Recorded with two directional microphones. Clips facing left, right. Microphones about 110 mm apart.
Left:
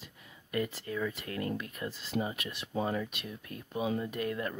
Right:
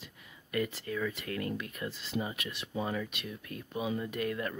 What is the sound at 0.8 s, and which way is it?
Speech, 20° left (ahead or behind).